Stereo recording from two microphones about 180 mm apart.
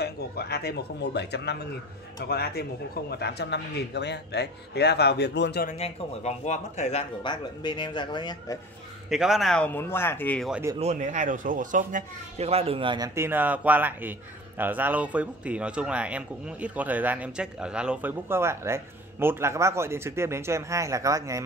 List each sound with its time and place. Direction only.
0.0 s speech: 65° left (ahead or behind)
5.7 s speech: 40° left (ahead or behind)
9.1 s speech: centre (ahead or behind)
10.5 s speech: 15° right (ahead or behind)
10.8 s speech: 40° right (ahead or behind); by 21.5 s 15° right (ahead or behind)